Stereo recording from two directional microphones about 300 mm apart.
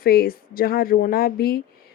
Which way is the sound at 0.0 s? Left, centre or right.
Left.